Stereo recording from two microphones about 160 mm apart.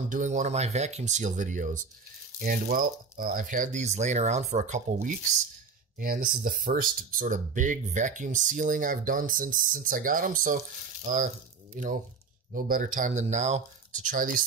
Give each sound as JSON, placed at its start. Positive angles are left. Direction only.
{"t": 0.1, "sound": "speech", "side_deg": -50}
{"t": 5.9, "sound": "speech", "side_deg": -60}